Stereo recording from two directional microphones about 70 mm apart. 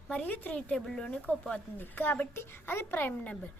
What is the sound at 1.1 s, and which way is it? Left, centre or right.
Speech, centre.